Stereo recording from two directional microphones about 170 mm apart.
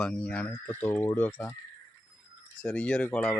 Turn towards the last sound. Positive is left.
turn(degrees=10)  # may be behind; listen again after turning